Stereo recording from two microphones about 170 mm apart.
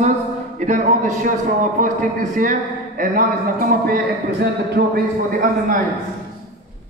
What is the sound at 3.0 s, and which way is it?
A man's voice, 55° right (ahead or behind).